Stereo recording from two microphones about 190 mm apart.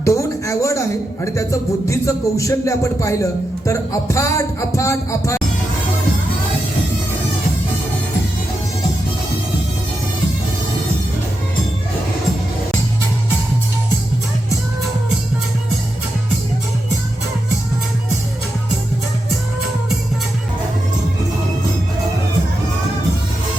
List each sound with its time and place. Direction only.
0.0 s speech: 15° left (ahead or behind)